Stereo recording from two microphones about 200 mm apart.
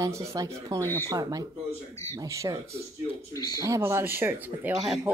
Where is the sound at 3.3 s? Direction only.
20° left (ahead or behind).